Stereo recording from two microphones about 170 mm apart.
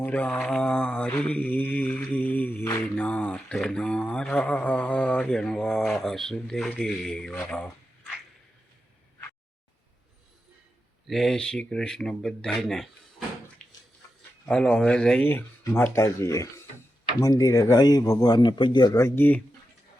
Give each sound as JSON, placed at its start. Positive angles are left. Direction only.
{"t": 0.0, "sound": "mantra", "side_deg": 10}
{"t": 7.4, "sound": "speech", "side_deg": 5}
{"t": 11.0, "sound": "speech", "side_deg": 0}
{"t": 14.4, "sound": "speech", "side_deg": 5}